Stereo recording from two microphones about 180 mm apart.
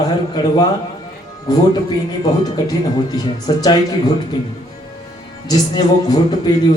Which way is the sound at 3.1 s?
20° left (ahead or behind).